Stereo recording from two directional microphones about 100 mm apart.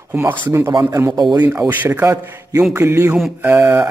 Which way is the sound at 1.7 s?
20° right (ahead or behind).